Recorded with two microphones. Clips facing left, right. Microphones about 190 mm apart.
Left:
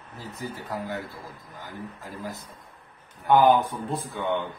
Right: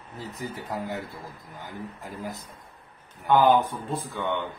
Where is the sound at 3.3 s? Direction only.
15° left (ahead or behind).